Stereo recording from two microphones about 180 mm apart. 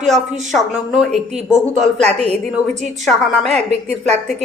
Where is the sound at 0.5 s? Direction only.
Centre (ahead or behind).